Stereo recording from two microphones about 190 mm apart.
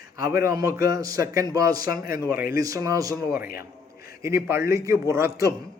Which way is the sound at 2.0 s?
50° left (ahead or behind).